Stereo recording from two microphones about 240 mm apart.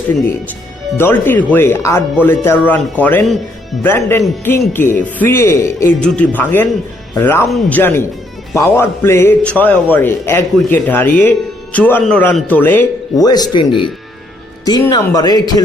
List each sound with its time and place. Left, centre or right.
0.9 s a man's voice: centre
14.6 s a man's voice: centre